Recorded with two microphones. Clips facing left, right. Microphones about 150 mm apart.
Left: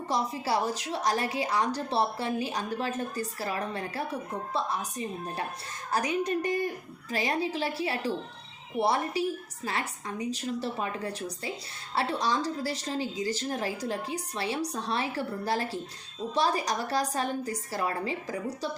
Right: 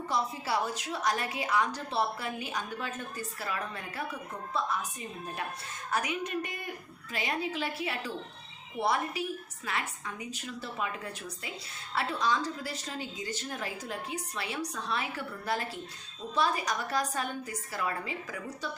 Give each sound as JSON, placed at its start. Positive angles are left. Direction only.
{"t": 0.1, "sound": "a woman's voice", "side_deg": 35}